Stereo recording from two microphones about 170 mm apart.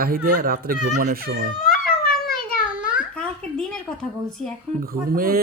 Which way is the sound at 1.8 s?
60° left (ahead or behind).